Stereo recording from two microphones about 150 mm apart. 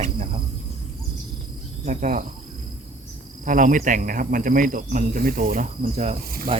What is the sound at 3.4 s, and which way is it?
Speech, 60° right (ahead or behind).